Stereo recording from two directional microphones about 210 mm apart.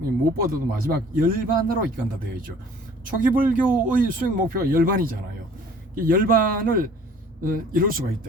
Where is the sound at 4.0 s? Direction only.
45° right (ahead or behind).